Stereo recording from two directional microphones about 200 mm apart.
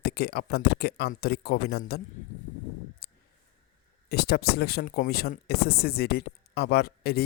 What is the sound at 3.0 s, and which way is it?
Clicking, 50° left (ahead or behind).